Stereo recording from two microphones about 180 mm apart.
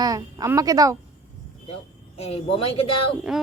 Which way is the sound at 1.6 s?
35° left (ahead or behind).